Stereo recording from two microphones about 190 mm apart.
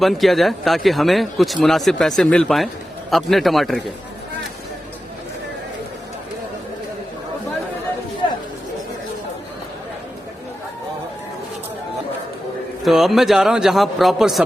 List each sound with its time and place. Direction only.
0.0 s a man's voice: centre (ahead or behind)
8.2 s chatter: 25° left (ahead or behind)
12.8 s a man's voice: centre (ahead or behind)